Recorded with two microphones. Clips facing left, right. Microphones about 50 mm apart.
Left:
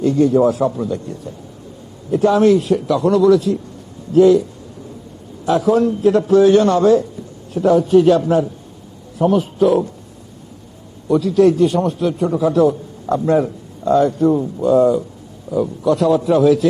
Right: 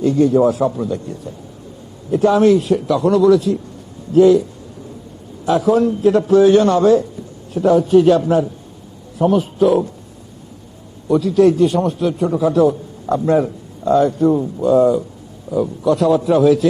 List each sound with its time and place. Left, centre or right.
0.0 s a man's voice: centre
5.5 s a man's voice: centre
11.1 s a man's voice: centre